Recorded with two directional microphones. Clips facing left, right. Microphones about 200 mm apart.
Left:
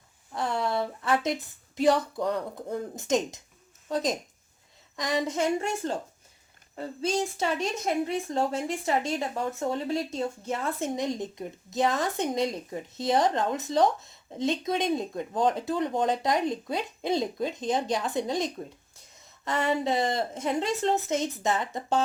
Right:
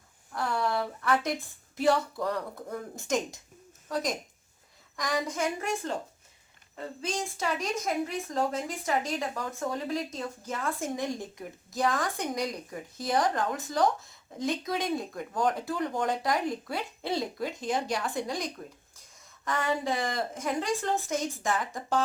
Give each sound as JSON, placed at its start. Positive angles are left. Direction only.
{"t": 0.3, "sound": "a woman's voice", "side_deg": 25}